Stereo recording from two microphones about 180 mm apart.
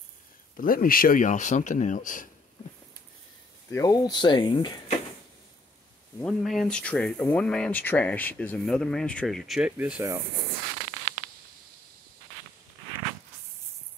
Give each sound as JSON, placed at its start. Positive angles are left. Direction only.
{"t": 0.6, "sound": "speech", "side_deg": 50}
{"t": 3.7, "sound": "speech", "side_deg": 20}
{"t": 6.2, "sound": "speech", "side_deg": 0}